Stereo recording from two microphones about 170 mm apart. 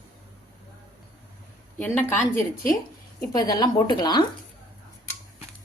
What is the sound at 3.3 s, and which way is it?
Speech, 25° left (ahead or behind).